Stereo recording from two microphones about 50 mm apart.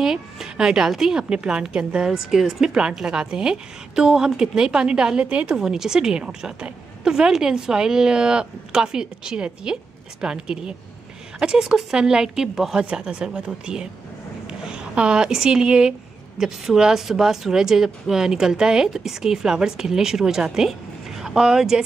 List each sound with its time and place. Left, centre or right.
0.0 s a woman's voice: centre
5.6 s a woman's voice: centre